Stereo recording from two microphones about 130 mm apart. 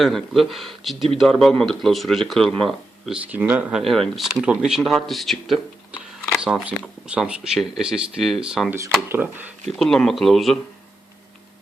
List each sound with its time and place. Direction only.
0.0 s speech: centre (ahead or behind)
3.3 s speech: 10° right (ahead or behind)
9.0 s speech: 15° right (ahead or behind)
9.7 s speech: 5° left (ahead or behind)